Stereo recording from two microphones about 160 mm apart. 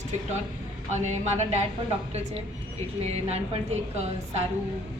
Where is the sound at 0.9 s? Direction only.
45° right (ahead or behind).